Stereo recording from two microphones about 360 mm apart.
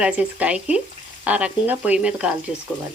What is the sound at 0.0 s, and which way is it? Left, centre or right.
Speech, centre.